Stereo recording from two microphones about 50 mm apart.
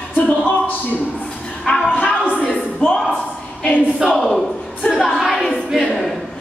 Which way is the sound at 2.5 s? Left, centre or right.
Centre.